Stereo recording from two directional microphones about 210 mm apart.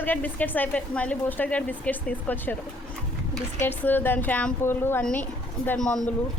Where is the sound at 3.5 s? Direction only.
10° left (ahead or behind).